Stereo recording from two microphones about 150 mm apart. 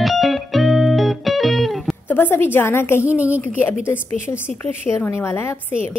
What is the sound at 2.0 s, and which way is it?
Speech, 15° left (ahead or behind).